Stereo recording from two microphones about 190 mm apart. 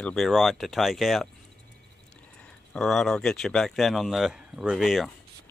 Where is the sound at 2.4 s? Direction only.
5° left (ahead or behind).